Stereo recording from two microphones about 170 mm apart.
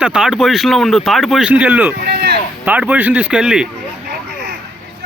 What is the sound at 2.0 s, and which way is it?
Speech, 70° right (ahead or behind).